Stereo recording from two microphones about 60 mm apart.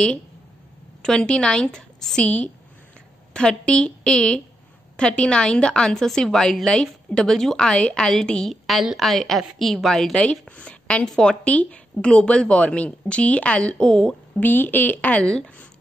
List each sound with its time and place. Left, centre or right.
1.0 s a woman's voice: centre
14.4 s a woman's voice: left